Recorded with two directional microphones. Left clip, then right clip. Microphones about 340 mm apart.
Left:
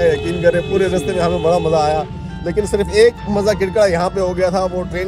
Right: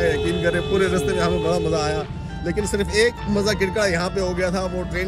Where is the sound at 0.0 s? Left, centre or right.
Centre.